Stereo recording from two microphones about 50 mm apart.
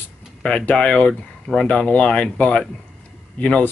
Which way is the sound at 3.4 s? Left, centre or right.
Left.